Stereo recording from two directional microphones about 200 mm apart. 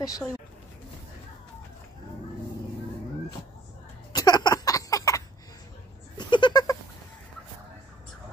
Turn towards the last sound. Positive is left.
turn(degrees=20)  # may be behind; listen again after turning